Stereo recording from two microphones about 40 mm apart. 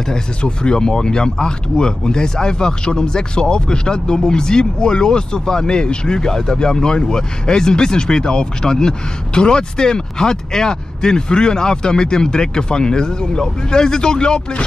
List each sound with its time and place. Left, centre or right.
0.1 s speech: left